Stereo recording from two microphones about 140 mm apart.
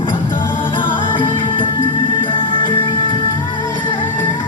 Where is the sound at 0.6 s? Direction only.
35° left (ahead or behind).